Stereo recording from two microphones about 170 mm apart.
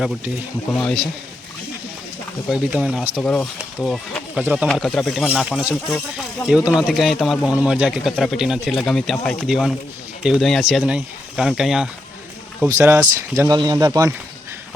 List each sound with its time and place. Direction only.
0.7 s a man's voice: 5° left (ahead or behind)
2.5 s a man's voice: 5° right (ahead or behind)
12.6 s speech: 15° right (ahead or behind)